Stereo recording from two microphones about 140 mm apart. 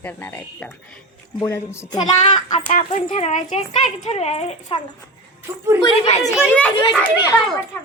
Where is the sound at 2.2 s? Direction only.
50° left (ahead or behind).